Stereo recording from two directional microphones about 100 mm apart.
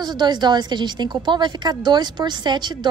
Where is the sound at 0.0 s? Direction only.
45° right (ahead or behind).